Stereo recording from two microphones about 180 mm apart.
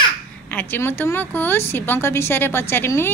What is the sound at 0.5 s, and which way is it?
Speech, 10° left (ahead or behind).